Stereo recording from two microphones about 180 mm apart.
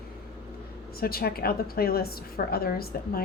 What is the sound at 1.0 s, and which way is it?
A woman's voice, 60° left (ahead or behind).